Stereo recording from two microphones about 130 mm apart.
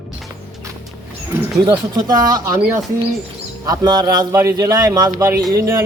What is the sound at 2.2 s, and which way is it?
Speech, 30° right (ahead or behind).